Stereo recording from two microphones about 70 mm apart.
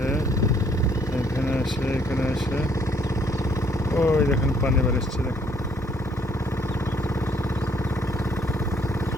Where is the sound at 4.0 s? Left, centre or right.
Left.